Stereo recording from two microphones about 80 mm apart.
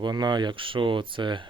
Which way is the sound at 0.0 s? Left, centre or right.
Right.